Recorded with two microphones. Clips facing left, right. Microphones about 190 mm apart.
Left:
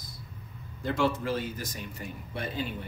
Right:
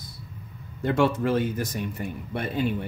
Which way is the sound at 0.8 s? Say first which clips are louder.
Right 5 dB; 60° right (ahead or behind).